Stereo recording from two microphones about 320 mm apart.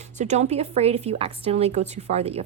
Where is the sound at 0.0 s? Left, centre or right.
Right.